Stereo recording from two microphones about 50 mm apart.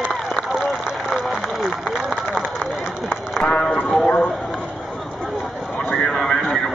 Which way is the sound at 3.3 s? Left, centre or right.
Left.